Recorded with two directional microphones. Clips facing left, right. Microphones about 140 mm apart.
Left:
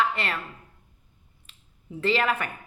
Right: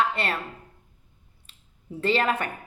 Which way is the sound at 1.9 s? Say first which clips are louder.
Right 1 dB; 30° right (ahead or behind).